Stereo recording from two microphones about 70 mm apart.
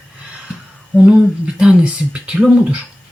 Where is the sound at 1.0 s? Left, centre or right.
Centre.